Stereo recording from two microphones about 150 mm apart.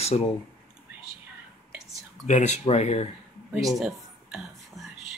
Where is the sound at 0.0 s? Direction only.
45° left (ahead or behind).